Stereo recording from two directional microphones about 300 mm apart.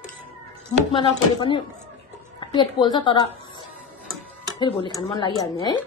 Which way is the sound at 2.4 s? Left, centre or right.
Centre.